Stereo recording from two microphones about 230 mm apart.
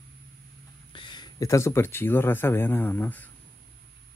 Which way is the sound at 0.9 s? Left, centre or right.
Centre.